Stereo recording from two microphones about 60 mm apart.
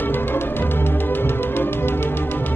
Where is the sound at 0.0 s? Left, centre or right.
Left.